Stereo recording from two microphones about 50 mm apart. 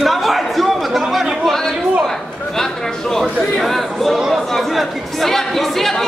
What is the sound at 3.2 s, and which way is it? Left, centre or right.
Speech, centre.